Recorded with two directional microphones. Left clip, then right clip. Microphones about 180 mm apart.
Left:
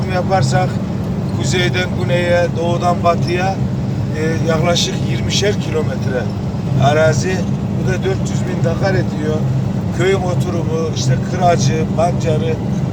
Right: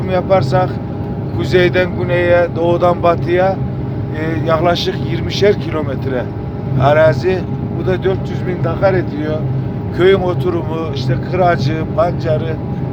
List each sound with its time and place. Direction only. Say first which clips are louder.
0.1 s speech: right 3 dB; 50° right (ahead or behind)
8.8 s speech: right 4 dB; 55° right (ahead or behind)